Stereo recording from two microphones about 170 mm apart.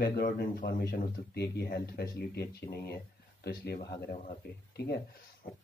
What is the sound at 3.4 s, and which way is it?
Speech, 70° left (ahead or behind).